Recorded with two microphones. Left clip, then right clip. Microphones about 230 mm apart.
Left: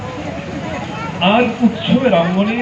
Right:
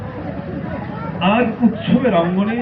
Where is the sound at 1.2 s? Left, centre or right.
Left.